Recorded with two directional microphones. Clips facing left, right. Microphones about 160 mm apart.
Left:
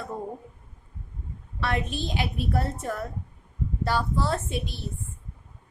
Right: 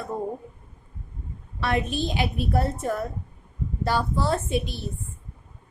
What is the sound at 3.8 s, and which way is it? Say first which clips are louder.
Speech: right 2 dB; 5° right (ahead or behind).